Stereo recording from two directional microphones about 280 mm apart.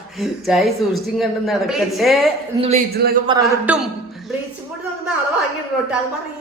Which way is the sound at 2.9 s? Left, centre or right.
Right.